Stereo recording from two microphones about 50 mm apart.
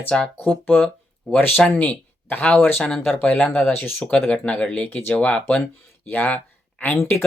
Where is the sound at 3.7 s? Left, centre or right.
Left.